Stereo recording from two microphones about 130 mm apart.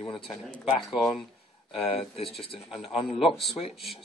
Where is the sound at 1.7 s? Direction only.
45° left (ahead or behind).